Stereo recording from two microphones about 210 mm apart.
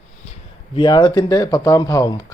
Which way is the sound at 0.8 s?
20° left (ahead or behind).